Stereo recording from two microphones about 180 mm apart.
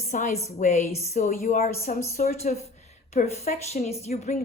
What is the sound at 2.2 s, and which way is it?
A woman's voice, 40° left (ahead or behind).